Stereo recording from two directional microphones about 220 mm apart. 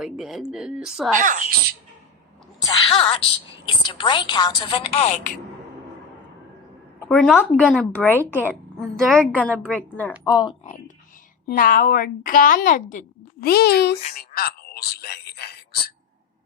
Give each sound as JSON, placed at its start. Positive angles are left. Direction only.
{"t": 0.0, "sound": "a woman's voice", "side_deg": 0}
{"t": 1.1, "sound": "speech", "side_deg": -35}
{"t": 2.6, "sound": "a sound", "side_deg": 20}
{"t": 3.8, "sound": "a woman's voice", "side_deg": 20}
{"t": 7.0, "sound": "a woman's voice", "side_deg": 5}
{"t": 7.5, "sound": "speech", "side_deg": -5}
{"t": 7.8, "sound": "a woman's voice", "side_deg": 5}
{"t": 10.2, "sound": "a woman's voice", "side_deg": 20}
{"t": 11.4, "sound": "a woman's voice", "side_deg": 40}
{"t": 14.2, "sound": "a sound", "side_deg": 45}